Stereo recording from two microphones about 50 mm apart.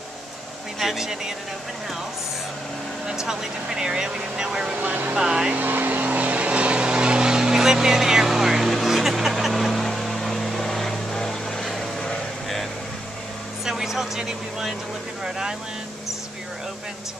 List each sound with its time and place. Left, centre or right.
0.7 s speech: centre
3.1 s speech: centre
4.7 s speech: right
5.1 s speech: centre
5.6 s vehicle: right; by 12.6 s centre
13.7 s speech: centre